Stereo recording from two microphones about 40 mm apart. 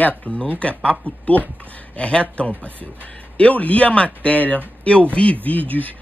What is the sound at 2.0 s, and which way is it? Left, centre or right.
Speech, left.